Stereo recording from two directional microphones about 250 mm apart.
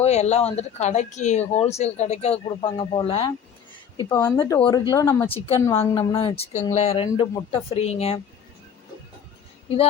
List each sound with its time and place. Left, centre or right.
0.0 s speech: left
4.1 s speech: centre